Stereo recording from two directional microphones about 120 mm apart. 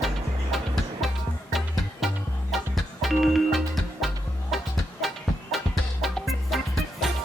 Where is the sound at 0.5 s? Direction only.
Centre (ahead or behind).